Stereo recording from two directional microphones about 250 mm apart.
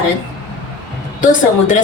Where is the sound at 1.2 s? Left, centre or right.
Left.